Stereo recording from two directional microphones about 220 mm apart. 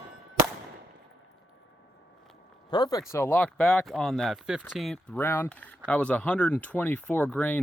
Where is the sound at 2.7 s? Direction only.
20° left (ahead or behind).